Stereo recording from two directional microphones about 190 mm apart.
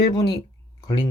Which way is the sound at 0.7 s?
20° left (ahead or behind).